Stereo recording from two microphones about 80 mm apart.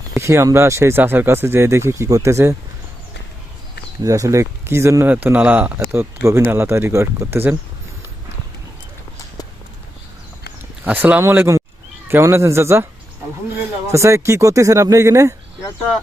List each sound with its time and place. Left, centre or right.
0.2 s speech: right
4.0 s speech: right
5.0 s speech: right
5.9 s speech: right
10.8 s speech: right
13.9 s speech: right